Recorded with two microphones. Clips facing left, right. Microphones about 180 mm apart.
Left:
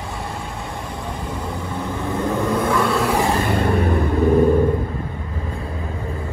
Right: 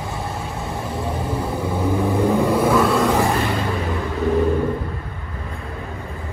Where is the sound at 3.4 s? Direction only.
55° left (ahead or behind).